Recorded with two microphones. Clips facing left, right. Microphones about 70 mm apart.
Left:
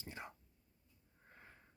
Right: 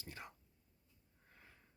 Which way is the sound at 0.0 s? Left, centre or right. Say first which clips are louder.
Left 2 dB; left.